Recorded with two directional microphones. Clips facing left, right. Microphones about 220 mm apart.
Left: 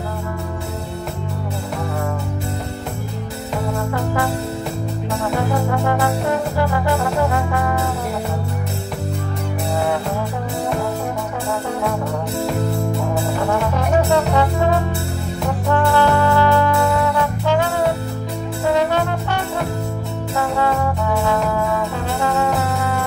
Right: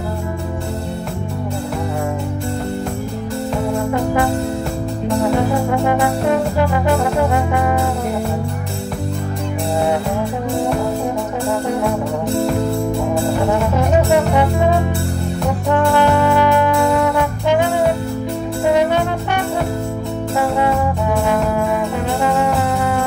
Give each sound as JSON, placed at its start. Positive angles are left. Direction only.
{"t": 3.9, "sound": "music", "side_deg": -20}
{"t": 5.7, "sound": "brass instrument", "side_deg": -20}
{"t": 14.1, "sound": "music", "side_deg": -15}
{"t": 15.7, "sound": "music", "side_deg": -20}
{"t": 20.3, "sound": "music", "side_deg": -20}